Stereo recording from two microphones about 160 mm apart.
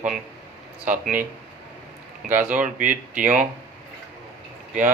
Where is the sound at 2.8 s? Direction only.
55° right (ahead or behind).